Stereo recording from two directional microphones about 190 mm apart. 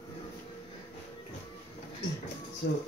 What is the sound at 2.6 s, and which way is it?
Speech, 75° left (ahead or behind).